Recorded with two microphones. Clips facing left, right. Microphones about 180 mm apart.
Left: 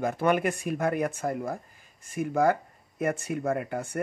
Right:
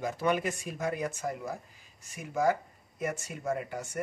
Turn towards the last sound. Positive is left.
turn(degrees=55)  # may be behind; listen again after turning